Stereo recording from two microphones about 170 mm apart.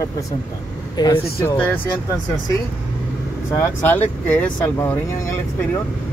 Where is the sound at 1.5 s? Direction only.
10° left (ahead or behind).